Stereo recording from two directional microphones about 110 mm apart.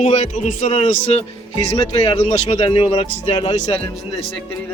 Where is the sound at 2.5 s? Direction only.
55° left (ahead or behind).